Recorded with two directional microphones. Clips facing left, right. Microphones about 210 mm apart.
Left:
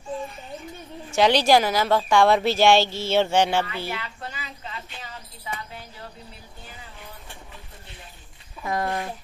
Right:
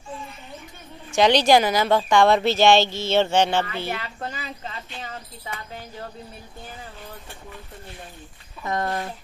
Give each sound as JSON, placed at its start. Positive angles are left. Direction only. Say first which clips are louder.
{"t": 1.1, "sound": "speech", "louder": "right 1 dB", "side_deg": 5}
{"t": 3.6, "sound": "a sound", "louder": "right 2 dB", "side_deg": -45}
{"t": 8.6, "sound": "speech", "louder": "even", "side_deg": 5}